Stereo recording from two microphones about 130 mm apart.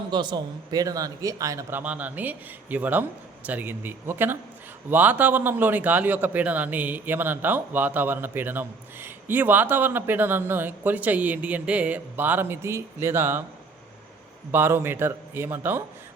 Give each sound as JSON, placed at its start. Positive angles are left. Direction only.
{"t": 0.1, "sound": "speech", "side_deg": -35}
{"t": 1.8, "sound": "a man's voice", "side_deg": -10}
{"t": 14.5, "sound": "a man's voice", "side_deg": -15}